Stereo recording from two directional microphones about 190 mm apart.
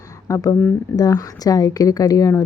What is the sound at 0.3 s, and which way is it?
Speech, 15° left (ahead or behind).